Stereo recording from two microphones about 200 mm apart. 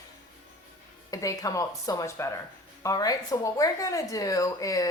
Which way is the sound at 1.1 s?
15° left (ahead or behind).